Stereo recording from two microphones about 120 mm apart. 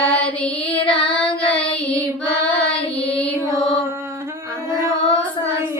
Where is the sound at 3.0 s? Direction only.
50° left (ahead or behind).